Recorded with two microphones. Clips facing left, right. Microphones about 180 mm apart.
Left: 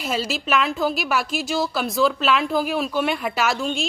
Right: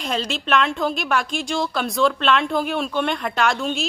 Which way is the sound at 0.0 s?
5° left (ahead or behind).